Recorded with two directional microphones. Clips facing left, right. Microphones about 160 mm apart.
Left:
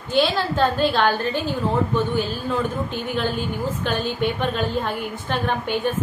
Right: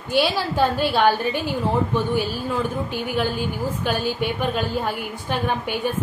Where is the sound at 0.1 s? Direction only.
10° right (ahead or behind).